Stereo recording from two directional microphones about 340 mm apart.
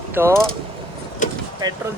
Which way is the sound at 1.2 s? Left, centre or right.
Left.